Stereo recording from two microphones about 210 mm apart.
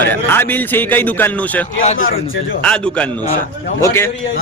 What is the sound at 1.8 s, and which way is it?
Speech, 35° left (ahead or behind).